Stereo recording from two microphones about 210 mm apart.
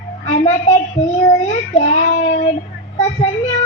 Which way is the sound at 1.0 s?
30° left (ahead or behind).